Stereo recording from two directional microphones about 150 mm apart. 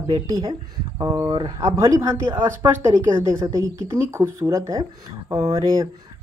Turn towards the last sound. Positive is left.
turn(degrees=-20)  # may be behind; listen again after turning